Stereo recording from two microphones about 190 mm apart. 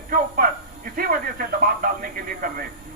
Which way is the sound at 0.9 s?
50° right (ahead or behind).